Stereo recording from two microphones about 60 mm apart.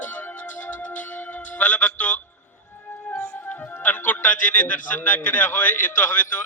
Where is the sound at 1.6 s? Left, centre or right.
Left.